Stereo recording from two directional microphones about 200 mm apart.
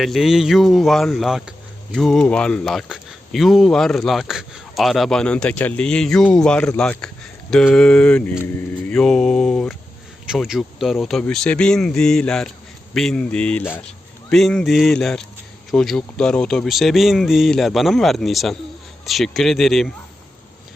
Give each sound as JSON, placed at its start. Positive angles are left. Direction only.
{"t": 0.0, "sound": "speech", "side_deg": 0}